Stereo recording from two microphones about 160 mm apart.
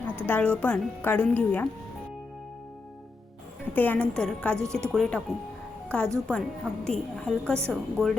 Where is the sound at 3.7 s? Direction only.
10° left (ahead or behind).